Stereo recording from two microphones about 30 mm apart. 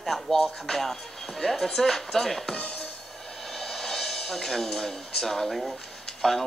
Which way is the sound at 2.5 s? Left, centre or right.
Left.